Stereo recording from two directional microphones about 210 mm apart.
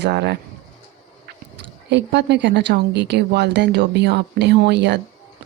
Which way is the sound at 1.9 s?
55° right (ahead or behind).